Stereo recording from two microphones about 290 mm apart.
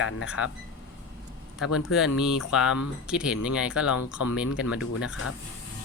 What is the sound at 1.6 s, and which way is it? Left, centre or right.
Speech, left.